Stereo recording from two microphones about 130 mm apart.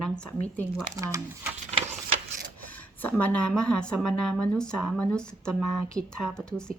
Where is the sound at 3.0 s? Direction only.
10° left (ahead or behind).